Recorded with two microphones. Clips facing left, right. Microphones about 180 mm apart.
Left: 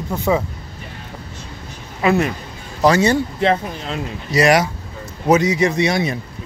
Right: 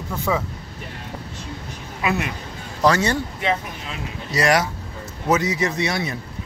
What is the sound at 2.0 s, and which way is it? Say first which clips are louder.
Speech: left 7 dB; 35° left (ahead or behind).